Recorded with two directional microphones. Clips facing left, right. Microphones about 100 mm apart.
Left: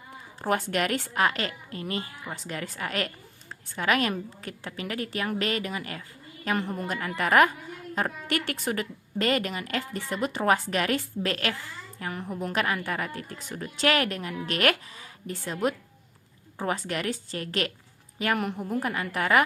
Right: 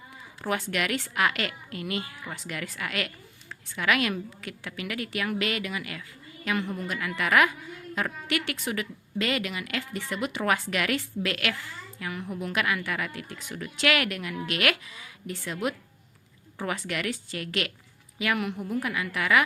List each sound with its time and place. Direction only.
0.4 s a woman's voice: 40° left (ahead or behind)